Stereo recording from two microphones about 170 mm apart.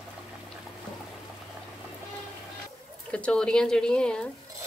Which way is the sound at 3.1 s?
5° left (ahead or behind).